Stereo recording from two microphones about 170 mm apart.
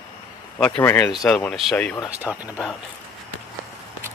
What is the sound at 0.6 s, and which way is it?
Speech, 10° left (ahead or behind).